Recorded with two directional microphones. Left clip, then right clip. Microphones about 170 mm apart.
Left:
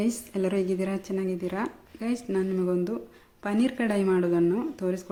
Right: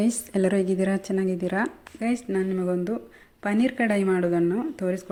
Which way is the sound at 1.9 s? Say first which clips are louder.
Right 2 dB; 10° right (ahead or behind).